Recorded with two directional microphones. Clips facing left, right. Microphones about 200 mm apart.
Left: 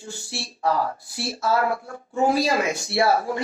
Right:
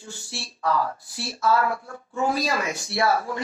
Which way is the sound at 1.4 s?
40° left (ahead or behind).